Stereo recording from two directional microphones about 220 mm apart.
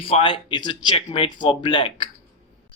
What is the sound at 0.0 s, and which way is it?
Speech, 25° left (ahead or behind).